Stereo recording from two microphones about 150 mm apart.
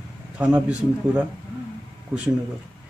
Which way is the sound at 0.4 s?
10° right (ahead or behind).